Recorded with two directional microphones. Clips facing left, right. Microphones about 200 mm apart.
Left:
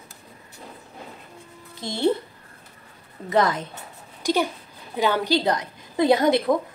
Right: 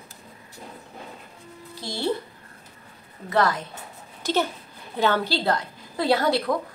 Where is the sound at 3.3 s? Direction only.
20° left (ahead or behind).